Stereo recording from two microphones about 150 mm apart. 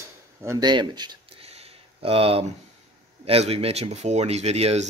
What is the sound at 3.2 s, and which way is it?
Speech, 40° right (ahead or behind).